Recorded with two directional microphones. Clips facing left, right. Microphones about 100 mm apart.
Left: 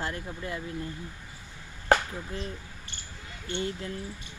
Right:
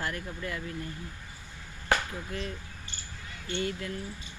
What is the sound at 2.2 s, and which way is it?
Speech, 25° left (ahead or behind).